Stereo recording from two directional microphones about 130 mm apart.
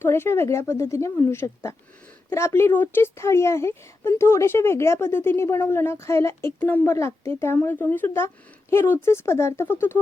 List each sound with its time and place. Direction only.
0.0 s speech: 20° left (ahead or behind)